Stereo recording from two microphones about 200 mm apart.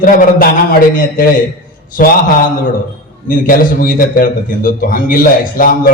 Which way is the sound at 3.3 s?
45° left (ahead or behind).